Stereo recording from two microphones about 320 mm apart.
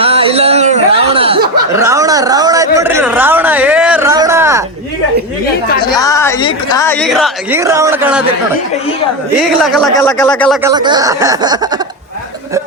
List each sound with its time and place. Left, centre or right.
0.0 s a sound: centre
5.9 s speech: centre
9.4 s speech: centre
10.6 s speech: centre